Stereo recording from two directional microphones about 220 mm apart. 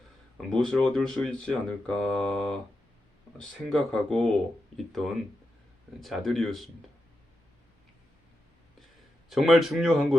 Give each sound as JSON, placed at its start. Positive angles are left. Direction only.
{"t": 0.5, "sound": "speech", "side_deg": 5}
{"t": 3.7, "sound": "speech", "side_deg": 0}
{"t": 9.3, "sound": "speech", "side_deg": 0}